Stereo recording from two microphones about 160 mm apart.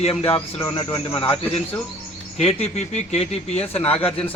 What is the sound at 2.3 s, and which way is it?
Speech, 45° left (ahead or behind).